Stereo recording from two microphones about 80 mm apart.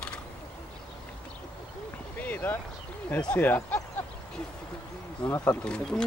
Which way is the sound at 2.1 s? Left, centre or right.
Left.